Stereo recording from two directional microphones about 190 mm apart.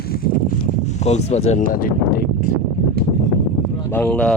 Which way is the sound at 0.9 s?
35° left (ahead or behind).